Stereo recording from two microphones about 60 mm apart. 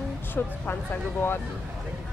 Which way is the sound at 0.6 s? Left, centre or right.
Left.